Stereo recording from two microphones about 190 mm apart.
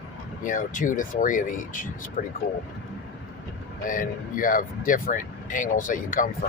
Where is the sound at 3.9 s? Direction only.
45° left (ahead or behind).